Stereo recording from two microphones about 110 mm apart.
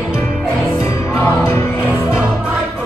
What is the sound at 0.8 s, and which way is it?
Music, 25° left (ahead or behind).